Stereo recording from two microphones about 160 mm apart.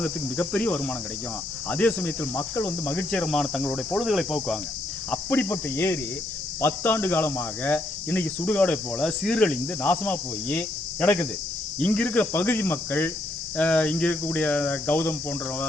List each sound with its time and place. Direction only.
0.0 s speech: 10° left (ahead or behind)
5.1 s speech: 15° left (ahead or behind)